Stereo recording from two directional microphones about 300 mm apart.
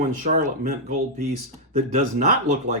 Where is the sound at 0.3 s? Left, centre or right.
Right.